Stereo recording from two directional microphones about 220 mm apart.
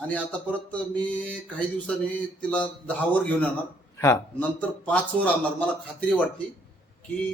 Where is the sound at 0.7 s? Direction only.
5° left (ahead or behind).